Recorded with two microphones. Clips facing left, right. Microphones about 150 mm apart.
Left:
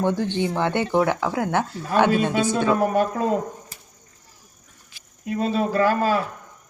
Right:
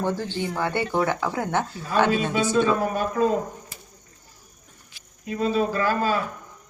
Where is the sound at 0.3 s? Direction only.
20° left (ahead or behind).